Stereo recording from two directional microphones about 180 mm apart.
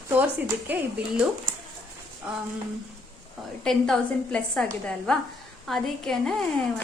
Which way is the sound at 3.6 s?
5° left (ahead or behind).